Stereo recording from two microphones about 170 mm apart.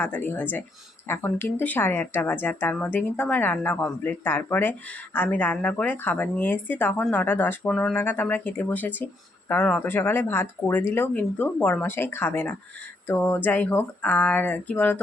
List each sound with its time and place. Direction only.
0.0 s speech: 10° left (ahead or behind)